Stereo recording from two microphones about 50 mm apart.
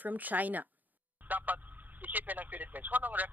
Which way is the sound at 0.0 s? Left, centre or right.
Right.